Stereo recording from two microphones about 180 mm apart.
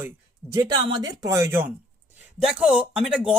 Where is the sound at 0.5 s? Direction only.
25° right (ahead or behind).